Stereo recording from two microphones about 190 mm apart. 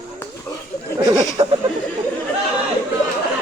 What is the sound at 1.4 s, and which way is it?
Speech, 30° right (ahead or behind).